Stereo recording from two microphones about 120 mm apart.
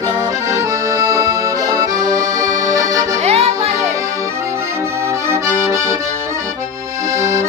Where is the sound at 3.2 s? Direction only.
55° right (ahead or behind).